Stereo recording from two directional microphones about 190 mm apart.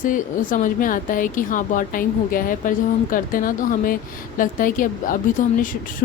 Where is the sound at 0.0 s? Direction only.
45° left (ahead or behind).